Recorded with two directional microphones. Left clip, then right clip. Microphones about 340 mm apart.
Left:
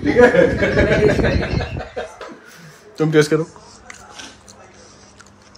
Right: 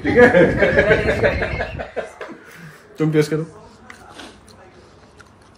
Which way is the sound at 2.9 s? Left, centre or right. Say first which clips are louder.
Left 3 dB; left.